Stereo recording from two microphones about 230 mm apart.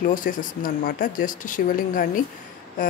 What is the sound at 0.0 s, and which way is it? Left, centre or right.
A woman's voice, left.